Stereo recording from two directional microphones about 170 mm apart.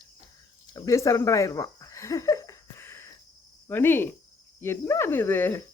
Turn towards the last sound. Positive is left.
turn(degrees=15)  # may be behind; listen again after turning